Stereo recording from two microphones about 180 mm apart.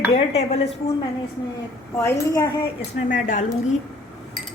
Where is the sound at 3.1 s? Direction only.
45° left (ahead or behind).